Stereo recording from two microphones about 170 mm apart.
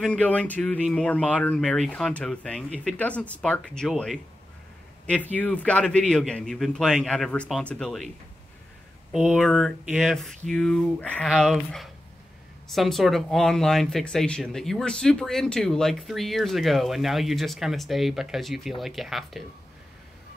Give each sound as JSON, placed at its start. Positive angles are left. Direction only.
{"t": 0.0, "sound": "speech", "side_deg": 5}
{"t": 9.1, "sound": "speech", "side_deg": 0}